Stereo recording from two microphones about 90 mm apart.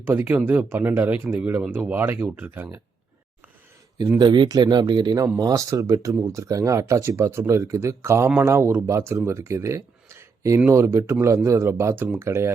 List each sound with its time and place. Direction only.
0.0 s speech: 25° right (ahead or behind)
4.2 s speech: 55° right (ahead or behind)
5.4 s speech: 40° right (ahead or behind)